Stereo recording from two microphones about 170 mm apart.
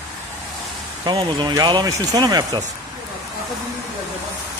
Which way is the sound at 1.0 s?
25° right (ahead or behind).